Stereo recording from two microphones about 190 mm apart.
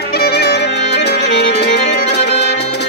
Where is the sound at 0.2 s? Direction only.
60° left (ahead or behind).